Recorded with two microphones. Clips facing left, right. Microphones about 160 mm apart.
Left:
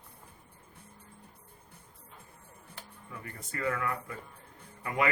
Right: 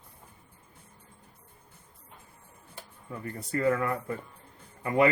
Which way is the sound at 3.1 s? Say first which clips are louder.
Right 10 dB; 35° right (ahead or behind).